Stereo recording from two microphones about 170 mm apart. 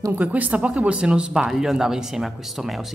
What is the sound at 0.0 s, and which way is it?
Speech, 10° right (ahead or behind).